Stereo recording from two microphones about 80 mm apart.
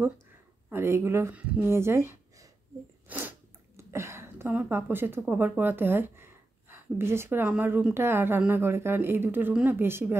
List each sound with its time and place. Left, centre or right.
0.7 s speech: right
1.3 s speech: centre
1.7 s speech: right
3.1 s sneeze: right
3.7 s a sound: right
5.3 s a woman's voice: right